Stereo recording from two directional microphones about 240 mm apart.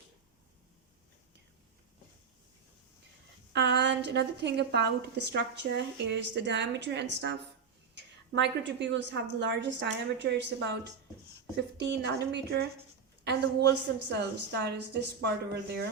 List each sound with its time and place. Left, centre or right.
3.5 s a woman's voice: right